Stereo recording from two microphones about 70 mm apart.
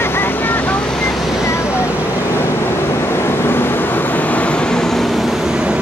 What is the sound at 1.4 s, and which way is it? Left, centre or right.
Vehicle, left.